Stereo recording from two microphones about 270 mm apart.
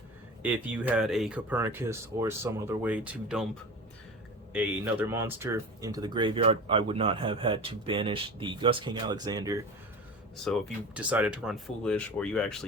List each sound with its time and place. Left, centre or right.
0.4 s speech: centre
4.5 s speech: centre
10.4 s speech: centre